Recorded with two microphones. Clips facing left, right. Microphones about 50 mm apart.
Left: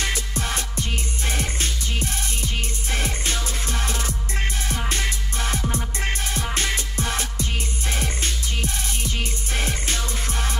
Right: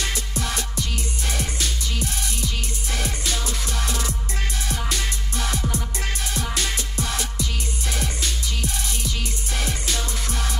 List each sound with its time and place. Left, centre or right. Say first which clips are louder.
0.3 s music: even; left